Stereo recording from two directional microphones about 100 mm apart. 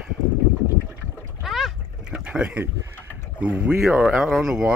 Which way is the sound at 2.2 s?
15° right (ahead or behind).